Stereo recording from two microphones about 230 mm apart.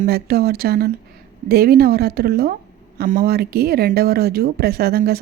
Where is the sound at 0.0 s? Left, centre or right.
Right.